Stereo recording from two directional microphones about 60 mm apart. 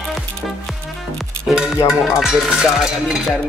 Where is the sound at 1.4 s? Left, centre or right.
Centre.